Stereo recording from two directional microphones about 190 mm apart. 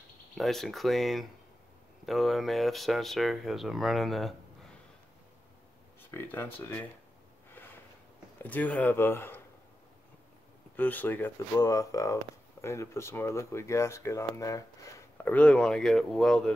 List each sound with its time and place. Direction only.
0.4 s speech: centre (ahead or behind)
6.1 s speech: 10° left (ahead or behind)
8.4 s speech: 10° left (ahead or behind)
10.8 s speech: 10° left (ahead or behind)